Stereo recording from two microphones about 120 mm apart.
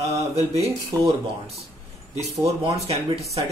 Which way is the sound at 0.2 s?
60° right (ahead or behind).